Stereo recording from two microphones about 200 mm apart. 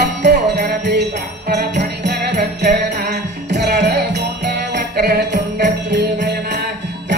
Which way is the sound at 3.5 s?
55° right (ahead or behind).